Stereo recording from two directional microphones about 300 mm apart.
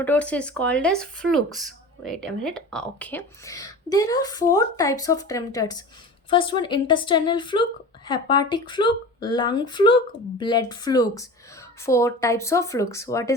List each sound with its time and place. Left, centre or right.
0.0 s speech: centre